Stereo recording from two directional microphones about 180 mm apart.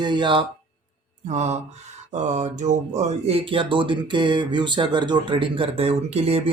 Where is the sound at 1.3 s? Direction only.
40° right (ahead or behind).